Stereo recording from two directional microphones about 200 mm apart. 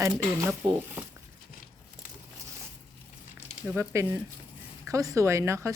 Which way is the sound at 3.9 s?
15° right (ahead or behind).